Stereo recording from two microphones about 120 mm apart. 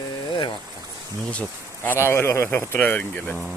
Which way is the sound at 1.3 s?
10° left (ahead or behind).